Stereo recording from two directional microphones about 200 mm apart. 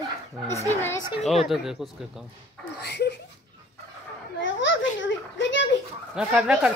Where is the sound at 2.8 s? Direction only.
55° left (ahead or behind).